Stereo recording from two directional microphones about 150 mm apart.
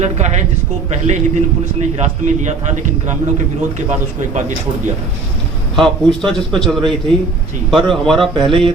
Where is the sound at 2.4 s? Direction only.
55° right (ahead or behind).